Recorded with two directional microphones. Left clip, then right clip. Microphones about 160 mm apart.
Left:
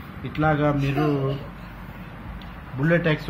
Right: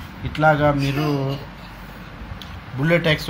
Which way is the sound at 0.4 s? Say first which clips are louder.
Right 6 dB; 65° right (ahead or behind).